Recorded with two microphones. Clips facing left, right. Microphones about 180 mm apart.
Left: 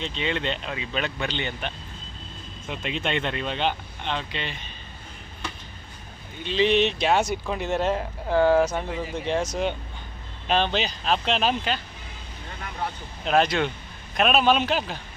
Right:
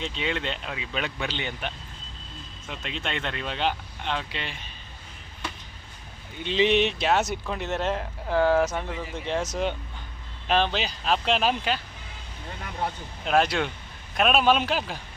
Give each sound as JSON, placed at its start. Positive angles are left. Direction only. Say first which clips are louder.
{"t": 0.0, "sound": "speech", "louder": "left 2 dB", "side_deg": -5}
{"t": 2.6, "sound": "speech", "louder": "left 5 dB", "side_deg": 10}
{"t": 6.4, "sound": "speech", "louder": "left 1 dB", "side_deg": -15}
{"t": 13.2, "sound": "speech", "louder": "left 1 dB", "side_deg": -5}